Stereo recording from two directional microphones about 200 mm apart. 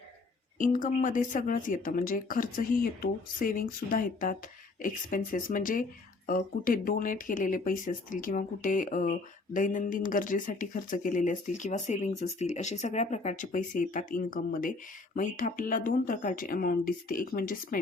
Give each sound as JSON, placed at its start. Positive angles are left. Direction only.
{"t": 0.6, "sound": "speech", "side_deg": 40}